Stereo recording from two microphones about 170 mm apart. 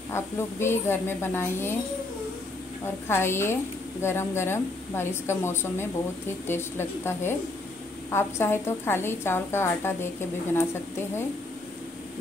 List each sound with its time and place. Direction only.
0.1 s a woman's voice: 15° left (ahead or behind)
3.1 s a woman's voice: 15° left (ahead or behind)